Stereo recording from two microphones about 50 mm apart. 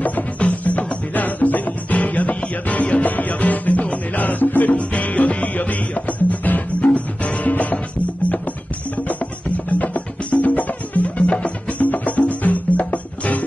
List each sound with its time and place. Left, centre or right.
0.0 s music: left
9.7 s music: left
11.1 s music: left
11.8 s music: left